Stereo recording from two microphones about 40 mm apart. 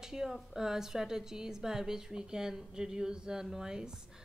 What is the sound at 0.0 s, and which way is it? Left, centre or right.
Speech, centre.